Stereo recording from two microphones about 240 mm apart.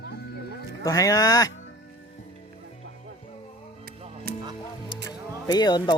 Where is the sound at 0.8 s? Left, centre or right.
Centre.